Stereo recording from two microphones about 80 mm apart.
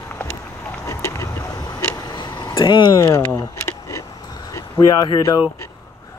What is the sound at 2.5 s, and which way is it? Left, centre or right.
Speech, left.